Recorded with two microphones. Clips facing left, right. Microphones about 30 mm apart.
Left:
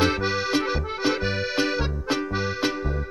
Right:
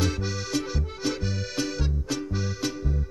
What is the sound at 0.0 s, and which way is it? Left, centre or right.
Accordion, left.